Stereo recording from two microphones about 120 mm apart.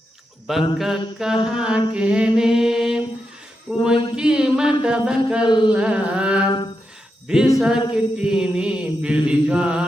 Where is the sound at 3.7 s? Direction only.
10° right (ahead or behind).